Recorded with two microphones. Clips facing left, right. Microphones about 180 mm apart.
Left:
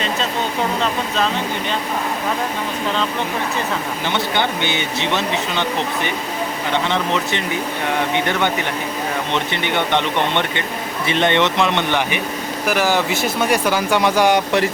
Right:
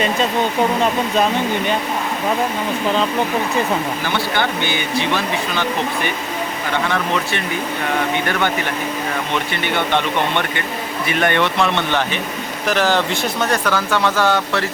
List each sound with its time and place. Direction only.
0.8 s speech: 15° right (ahead or behind)
4.0 s speech: 20° left (ahead or behind)
6.8 s speech: 20° left (ahead or behind)
9.3 s speech: 20° left (ahead or behind)